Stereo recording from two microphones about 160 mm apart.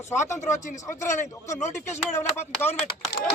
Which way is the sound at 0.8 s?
15° left (ahead or behind).